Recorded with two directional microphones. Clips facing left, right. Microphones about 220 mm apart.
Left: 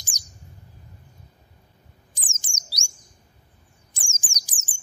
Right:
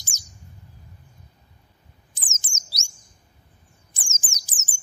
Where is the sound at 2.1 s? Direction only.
15° left (ahead or behind).